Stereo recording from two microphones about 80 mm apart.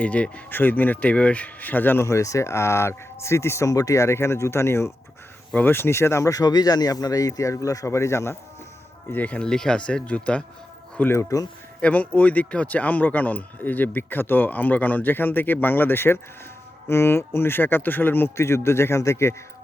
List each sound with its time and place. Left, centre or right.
0.0 s speech: centre
2.0 s speech: left
9.1 s speech: centre
10.9 s speech: left
11.2 s speech: left
11.8 s speech: centre; by 19.4 s left